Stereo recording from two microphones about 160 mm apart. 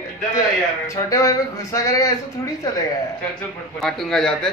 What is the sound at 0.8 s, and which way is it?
Speech, 20° left (ahead or behind).